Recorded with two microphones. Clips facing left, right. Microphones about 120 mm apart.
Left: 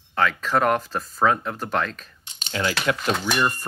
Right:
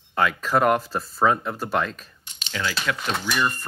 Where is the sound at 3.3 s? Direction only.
15° left (ahead or behind).